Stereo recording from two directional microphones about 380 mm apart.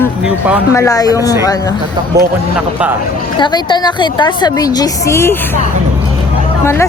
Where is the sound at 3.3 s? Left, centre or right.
Centre.